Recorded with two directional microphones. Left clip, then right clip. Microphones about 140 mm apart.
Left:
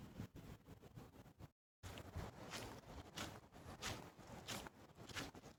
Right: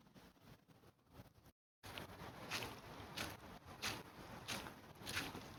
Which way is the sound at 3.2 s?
5° left (ahead or behind).